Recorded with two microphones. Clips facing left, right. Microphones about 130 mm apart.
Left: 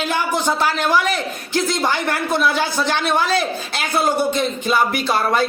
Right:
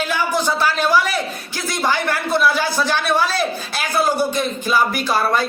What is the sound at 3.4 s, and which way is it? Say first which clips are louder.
Speech: even; 25° left (ahead or behind).